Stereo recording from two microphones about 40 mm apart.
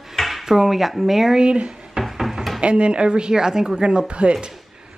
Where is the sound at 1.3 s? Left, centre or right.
Right.